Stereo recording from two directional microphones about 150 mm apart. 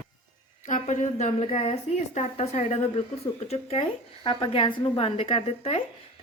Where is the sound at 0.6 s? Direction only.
55° left (ahead or behind).